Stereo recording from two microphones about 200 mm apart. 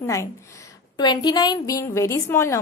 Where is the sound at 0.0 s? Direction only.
15° left (ahead or behind).